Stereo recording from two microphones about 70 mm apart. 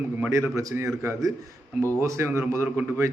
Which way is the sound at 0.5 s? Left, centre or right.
Right.